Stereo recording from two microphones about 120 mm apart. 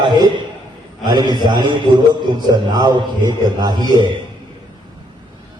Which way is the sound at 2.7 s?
35° right (ahead or behind).